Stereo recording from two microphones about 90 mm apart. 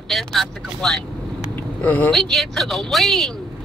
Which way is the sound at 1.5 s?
20° left (ahead or behind).